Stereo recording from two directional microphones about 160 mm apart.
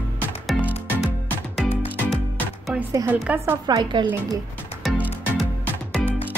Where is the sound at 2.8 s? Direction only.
10° right (ahead or behind).